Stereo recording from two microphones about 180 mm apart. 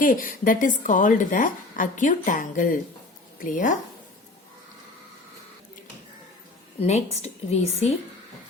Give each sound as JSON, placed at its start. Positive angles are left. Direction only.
{"t": 0.0, "sound": "a woman's voice", "side_deg": 50}
{"t": 6.7, "sound": "a woman's voice", "side_deg": 35}